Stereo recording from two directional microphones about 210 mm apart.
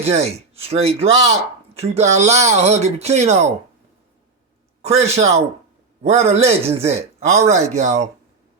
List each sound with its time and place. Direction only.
0.0 s speech: 30° right (ahead or behind)
4.8 s speech: 30° right (ahead or behind)